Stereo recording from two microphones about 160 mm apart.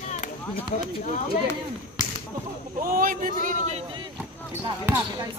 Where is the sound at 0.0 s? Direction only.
50° left (ahead or behind).